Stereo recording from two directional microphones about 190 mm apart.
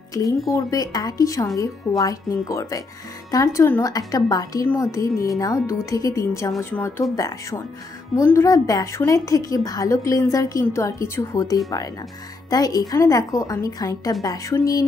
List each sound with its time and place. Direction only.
0.1 s a woman's voice: 20° left (ahead or behind)